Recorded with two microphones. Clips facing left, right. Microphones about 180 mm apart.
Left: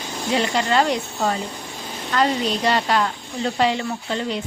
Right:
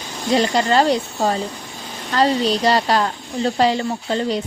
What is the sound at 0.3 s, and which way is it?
A woman's voice, 35° right (ahead or behind).